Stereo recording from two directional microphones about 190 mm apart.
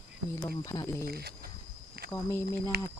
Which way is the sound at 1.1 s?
55° right (ahead or behind).